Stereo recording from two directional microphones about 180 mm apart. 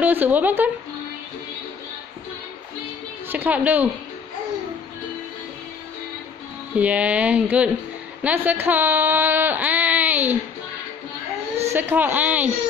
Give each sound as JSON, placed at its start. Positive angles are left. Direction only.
{"t": 0.0, "sound": "speech", "side_deg": -10}
{"t": 3.3, "sound": "a woman's voice", "side_deg": -10}
{"t": 6.8, "sound": "speech", "side_deg": -5}
{"t": 11.6, "sound": "speech", "side_deg": -10}